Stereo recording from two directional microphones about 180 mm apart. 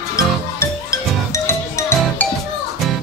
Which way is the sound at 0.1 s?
15° left (ahead or behind).